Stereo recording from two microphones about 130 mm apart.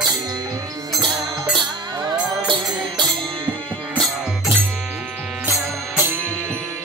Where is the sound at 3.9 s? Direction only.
Centre (ahead or behind).